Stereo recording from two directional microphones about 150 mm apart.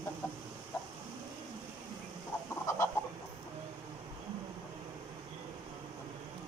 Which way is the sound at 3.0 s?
15° left (ahead or behind).